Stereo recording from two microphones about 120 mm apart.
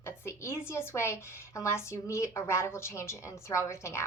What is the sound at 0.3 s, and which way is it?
A woman's voice, 20° left (ahead or behind).